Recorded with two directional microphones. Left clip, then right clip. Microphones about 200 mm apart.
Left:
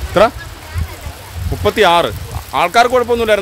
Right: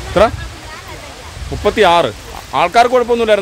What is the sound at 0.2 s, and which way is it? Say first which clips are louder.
Speech: even; 15° left (ahead or behind).